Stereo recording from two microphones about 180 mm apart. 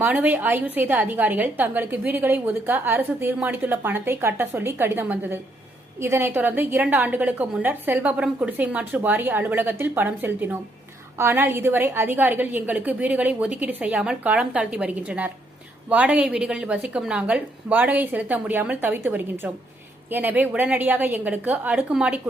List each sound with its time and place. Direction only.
0.0 s a woman's voice: 10° right (ahead or behind)